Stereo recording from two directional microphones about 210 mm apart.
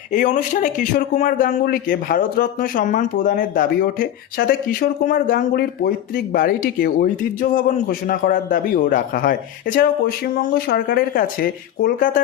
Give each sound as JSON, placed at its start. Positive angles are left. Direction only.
{"t": 0.1, "sound": "a man's voice", "side_deg": 35}